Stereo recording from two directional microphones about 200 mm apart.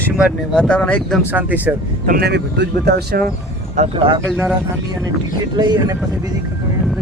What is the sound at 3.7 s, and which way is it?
Speech, 25° right (ahead or behind).